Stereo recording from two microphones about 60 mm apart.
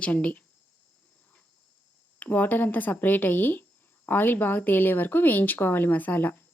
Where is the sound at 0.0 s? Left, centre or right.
Left.